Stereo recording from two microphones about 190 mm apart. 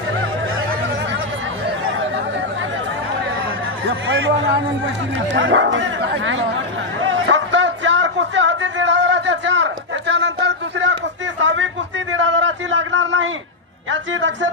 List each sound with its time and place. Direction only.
3.8 s speech: 90° right
5.3 s speech: 85° right
7.0 s a sound: 85° right
13.9 s speech: 75° right (ahead or behind)